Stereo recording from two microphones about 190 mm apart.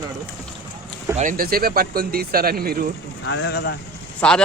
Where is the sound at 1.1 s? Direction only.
40° right (ahead or behind).